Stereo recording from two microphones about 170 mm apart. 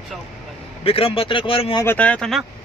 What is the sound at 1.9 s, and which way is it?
Speech, 10° left (ahead or behind).